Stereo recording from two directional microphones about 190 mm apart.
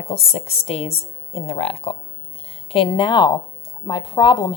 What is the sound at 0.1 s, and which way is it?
A woman's voice, 30° left (ahead or behind).